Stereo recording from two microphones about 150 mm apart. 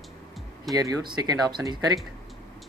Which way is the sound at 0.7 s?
25° right (ahead or behind).